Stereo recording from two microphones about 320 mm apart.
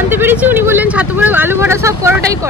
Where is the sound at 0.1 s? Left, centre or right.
Centre.